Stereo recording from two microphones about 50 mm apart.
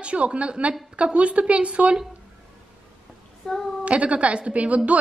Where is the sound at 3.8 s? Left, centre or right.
Right.